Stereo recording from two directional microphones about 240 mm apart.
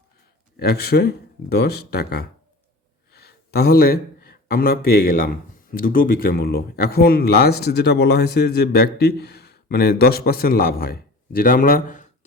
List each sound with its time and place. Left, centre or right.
0.5 s speech: left